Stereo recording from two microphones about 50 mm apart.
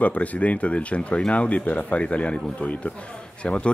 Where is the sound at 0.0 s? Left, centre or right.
Left.